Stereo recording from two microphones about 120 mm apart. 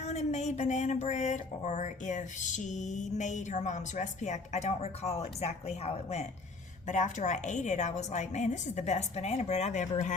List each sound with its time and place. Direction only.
0.0 s speech: 65° left (ahead or behind)
6.8 s a woman's voice: 90° left